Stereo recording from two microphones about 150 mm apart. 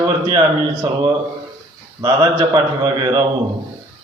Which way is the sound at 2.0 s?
30° right (ahead or behind).